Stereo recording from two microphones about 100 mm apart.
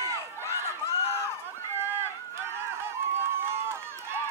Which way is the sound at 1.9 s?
25° right (ahead or behind).